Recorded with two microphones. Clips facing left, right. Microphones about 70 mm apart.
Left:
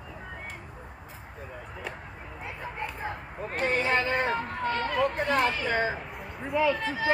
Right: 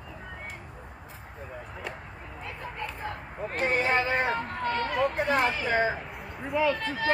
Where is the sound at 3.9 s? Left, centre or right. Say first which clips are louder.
Even; centre.